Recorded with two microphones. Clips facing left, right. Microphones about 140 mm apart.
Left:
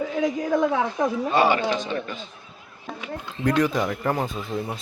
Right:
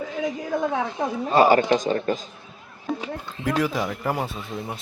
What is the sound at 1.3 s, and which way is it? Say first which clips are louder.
Speech: right 6 dB; 40° right (ahead or behind).